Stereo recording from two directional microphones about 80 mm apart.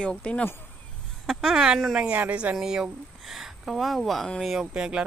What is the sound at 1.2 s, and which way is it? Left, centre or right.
Speech, centre.